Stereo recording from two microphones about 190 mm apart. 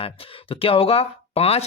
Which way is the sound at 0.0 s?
30° left (ahead or behind).